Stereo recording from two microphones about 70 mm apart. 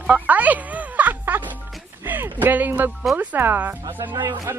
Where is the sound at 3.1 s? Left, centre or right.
Right.